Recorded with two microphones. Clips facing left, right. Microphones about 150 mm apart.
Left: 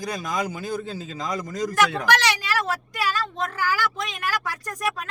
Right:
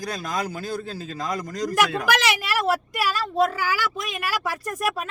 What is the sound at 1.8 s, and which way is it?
Speech, 10° right (ahead or behind).